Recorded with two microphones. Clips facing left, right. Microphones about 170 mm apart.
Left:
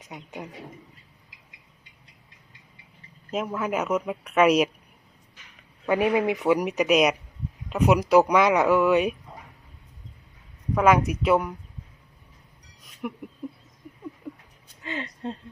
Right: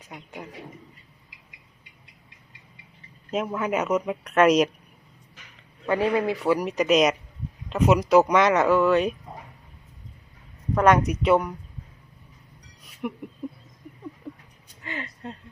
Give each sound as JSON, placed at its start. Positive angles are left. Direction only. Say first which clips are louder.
{"t": 3.3, "sound": "speech", "louder": "right 1 dB", "side_deg": 0}
{"t": 5.9, "sound": "speech", "louder": "left 1 dB", "side_deg": 15}
{"t": 10.8, "sound": "speech", "louder": "right 1 dB", "side_deg": 5}
{"t": 12.8, "sound": "a sound", "louder": "right 2 dB", "side_deg": 0}
{"t": 13.4, "sound": "speech", "louder": "right 2 dB", "side_deg": 0}
{"t": 14.8, "sound": "speech", "louder": "left 3 dB", "side_deg": 20}